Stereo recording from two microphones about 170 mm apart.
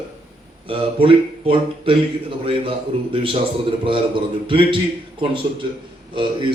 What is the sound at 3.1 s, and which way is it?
Speech, 30° right (ahead or behind).